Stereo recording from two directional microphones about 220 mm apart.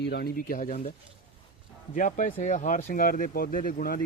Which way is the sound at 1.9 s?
35° left (ahead or behind).